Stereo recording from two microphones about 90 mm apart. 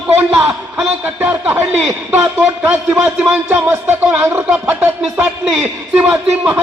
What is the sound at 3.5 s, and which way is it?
Speech, 25° right (ahead or behind).